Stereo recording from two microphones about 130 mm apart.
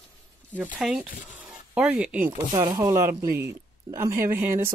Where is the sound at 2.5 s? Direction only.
35° right (ahead or behind).